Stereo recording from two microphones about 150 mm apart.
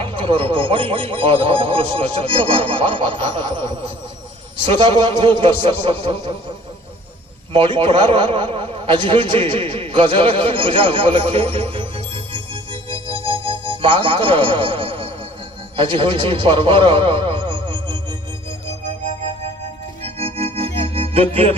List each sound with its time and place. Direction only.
0.0 s speech: 35° right (ahead or behind)
7.5 s a man's voice: 35° right (ahead or behind)
20.0 s organ: 40° right (ahead or behind)